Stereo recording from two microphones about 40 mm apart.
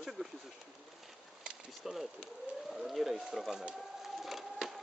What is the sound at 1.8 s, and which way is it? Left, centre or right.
Speech, centre.